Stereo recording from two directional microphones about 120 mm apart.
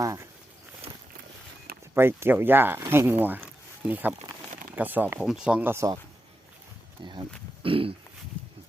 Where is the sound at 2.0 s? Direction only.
20° right (ahead or behind).